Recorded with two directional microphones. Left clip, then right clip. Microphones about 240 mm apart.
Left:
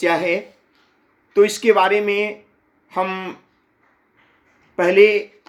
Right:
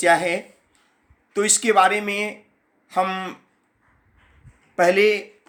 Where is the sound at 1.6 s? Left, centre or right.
Centre.